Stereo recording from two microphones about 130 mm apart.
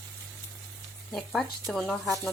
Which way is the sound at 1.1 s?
Centre (ahead or behind).